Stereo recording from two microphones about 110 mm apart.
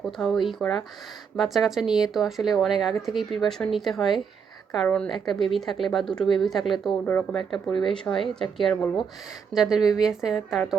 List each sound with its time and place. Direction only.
0.0 s speech: centre (ahead or behind)
7.0 s speech: 20° left (ahead or behind)
7.3 s speech: 5° left (ahead or behind)